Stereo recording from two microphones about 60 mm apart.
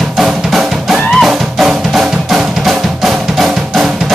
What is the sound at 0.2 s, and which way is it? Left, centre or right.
Music, centre.